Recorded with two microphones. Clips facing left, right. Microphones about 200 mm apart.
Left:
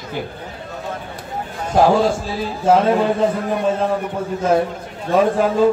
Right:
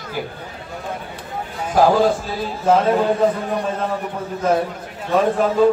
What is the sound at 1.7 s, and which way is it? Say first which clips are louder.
Speech: left 1 dB; 25° left (ahead or behind).